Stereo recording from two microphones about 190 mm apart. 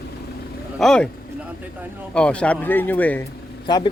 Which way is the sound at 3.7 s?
20° left (ahead or behind).